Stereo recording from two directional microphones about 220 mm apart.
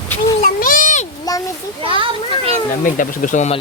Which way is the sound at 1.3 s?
15° left (ahead or behind).